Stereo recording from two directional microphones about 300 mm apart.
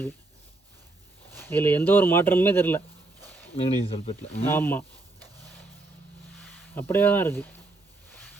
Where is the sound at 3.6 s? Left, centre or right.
Centre.